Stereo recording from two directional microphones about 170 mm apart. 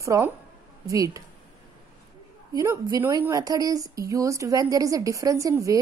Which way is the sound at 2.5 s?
20° right (ahead or behind).